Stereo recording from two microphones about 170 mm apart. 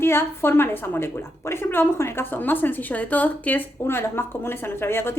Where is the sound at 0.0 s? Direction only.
15° left (ahead or behind).